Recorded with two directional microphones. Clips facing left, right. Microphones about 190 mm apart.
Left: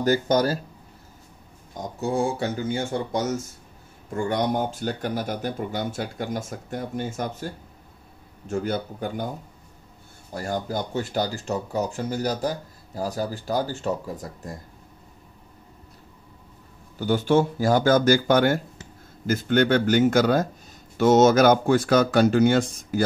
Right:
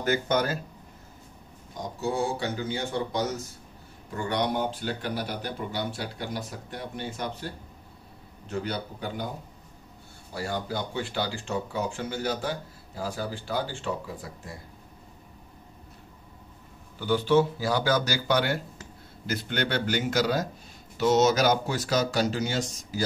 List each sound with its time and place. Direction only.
0.0 s speech: 35° left (ahead or behind)
1.7 s speech: 50° left (ahead or behind)
10.3 s speech: 45° left (ahead or behind)
17.0 s speech: 45° left (ahead or behind)